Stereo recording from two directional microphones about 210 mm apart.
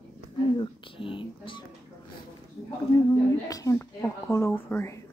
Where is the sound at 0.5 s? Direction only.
25° left (ahead or behind).